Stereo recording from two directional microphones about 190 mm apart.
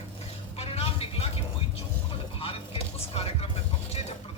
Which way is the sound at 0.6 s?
30° left (ahead or behind).